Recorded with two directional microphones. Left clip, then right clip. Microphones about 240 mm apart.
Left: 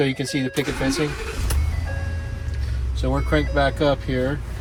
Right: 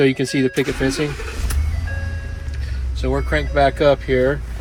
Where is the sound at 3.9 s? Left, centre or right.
Left.